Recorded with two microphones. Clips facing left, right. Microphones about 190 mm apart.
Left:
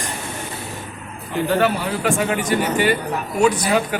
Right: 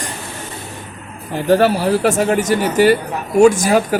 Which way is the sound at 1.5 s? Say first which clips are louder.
Right 7 dB; 40° right (ahead or behind).